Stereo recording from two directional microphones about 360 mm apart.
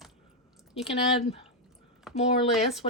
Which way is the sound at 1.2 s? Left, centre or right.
Centre.